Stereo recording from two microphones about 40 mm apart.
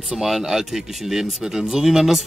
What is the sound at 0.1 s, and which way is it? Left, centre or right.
Speech, centre.